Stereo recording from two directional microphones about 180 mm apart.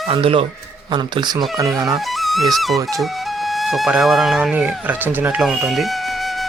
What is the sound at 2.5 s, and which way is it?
A man's voice, centre (ahead or behind).